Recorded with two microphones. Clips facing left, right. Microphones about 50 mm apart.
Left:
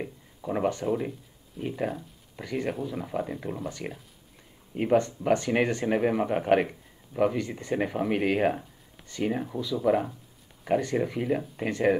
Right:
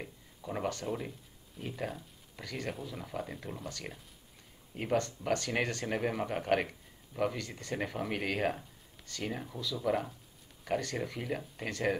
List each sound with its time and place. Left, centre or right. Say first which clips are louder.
0.0 s speech: left 8 dB; centre